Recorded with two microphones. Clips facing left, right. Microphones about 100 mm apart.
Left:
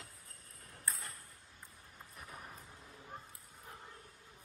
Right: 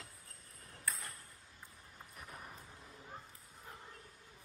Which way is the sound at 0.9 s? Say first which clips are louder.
Even; 30° left (ahead or behind).